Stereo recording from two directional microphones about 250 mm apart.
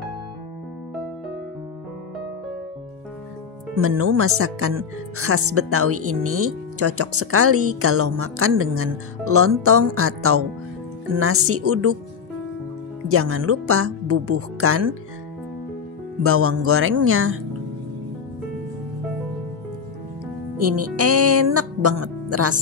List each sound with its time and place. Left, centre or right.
3.7 s speech: right
13.1 s speech: right
16.2 s speech: right
20.5 s speech: right